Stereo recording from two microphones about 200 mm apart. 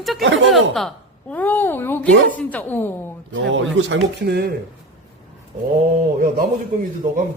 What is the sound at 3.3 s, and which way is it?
Speech, 70° right (ahead or behind).